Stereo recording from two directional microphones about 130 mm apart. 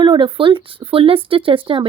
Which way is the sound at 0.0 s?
40° right (ahead or behind).